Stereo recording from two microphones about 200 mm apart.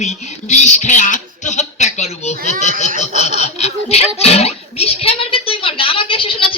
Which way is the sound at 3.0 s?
35° left (ahead or behind).